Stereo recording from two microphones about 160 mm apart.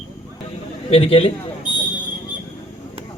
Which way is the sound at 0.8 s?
40° left (ahead or behind).